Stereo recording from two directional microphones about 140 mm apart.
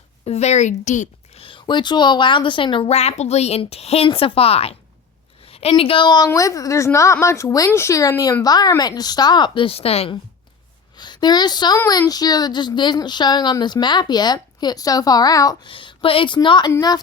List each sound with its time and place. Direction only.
0.3 s a woman's voice: 50° left (ahead or behind)
1.4 s a woman's voice: 40° left (ahead or behind)
10.9 s a woman's voice: 30° left (ahead or behind)